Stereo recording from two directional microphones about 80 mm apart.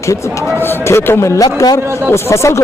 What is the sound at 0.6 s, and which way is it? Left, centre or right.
Speech, left.